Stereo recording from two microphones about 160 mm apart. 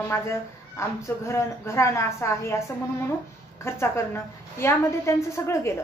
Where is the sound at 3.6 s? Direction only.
15° left (ahead or behind).